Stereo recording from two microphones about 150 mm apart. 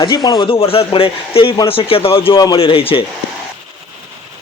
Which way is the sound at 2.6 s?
40° left (ahead or behind).